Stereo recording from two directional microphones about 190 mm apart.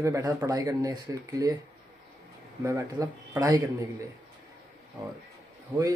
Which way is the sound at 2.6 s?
15° right (ahead or behind).